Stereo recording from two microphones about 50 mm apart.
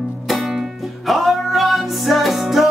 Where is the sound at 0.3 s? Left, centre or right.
Centre.